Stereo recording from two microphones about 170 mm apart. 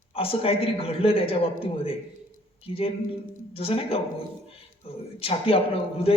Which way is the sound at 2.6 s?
35° left (ahead or behind).